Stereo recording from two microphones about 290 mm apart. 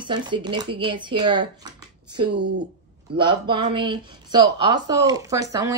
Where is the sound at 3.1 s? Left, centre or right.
Centre.